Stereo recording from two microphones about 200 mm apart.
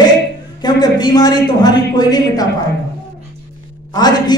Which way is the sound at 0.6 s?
20° left (ahead or behind).